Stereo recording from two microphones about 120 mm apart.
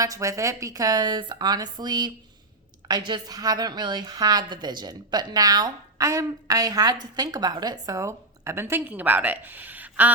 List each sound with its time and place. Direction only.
0.0 s a woman's voice: 25° right (ahead or behind)